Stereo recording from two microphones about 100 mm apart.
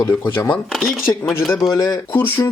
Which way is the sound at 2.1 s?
20° left (ahead or behind).